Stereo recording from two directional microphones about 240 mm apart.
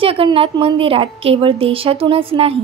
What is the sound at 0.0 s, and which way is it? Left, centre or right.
A woman's voice, right.